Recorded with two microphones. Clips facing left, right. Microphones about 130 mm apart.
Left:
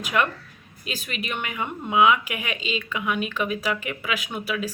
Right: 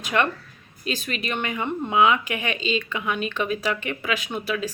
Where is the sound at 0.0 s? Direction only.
10° left (ahead or behind).